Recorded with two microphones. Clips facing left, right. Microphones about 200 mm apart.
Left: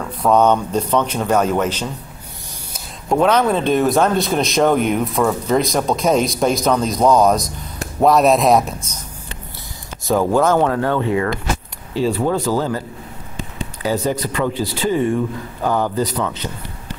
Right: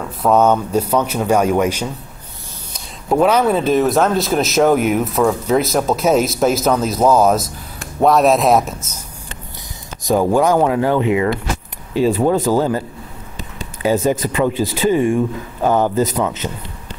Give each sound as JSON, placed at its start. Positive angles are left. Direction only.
{"t": 0.2, "sound": "speech", "side_deg": -5}
{"t": 3.1, "sound": "speech", "side_deg": -5}
{"t": 10.0, "sound": "speech", "side_deg": -15}
{"t": 13.9, "sound": "speech", "side_deg": -50}
{"t": 14.3, "sound": "speech", "side_deg": -15}